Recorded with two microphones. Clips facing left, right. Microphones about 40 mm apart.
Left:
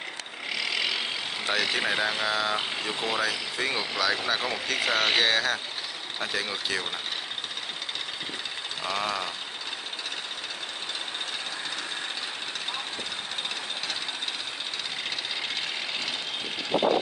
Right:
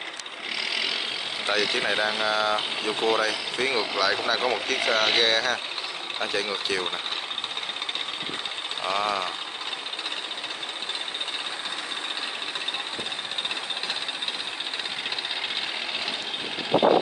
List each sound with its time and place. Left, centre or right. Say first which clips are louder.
0.6 s vehicle: even; centre
1.4 s speech: right 2 dB; centre
8.8 s speech: right 4 dB; right